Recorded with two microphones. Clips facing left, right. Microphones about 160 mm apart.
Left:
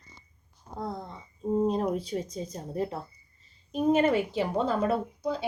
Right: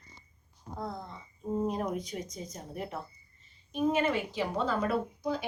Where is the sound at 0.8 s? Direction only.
35° left (ahead or behind).